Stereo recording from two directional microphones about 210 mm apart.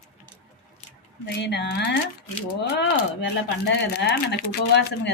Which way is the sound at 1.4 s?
55° left (ahead or behind).